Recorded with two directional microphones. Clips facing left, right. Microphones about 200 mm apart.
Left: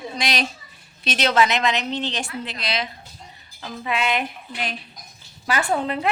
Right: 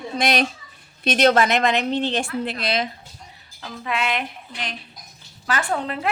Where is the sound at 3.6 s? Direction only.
5° left (ahead or behind).